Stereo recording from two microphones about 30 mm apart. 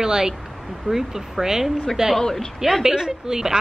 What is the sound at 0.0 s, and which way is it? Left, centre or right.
Speech, right.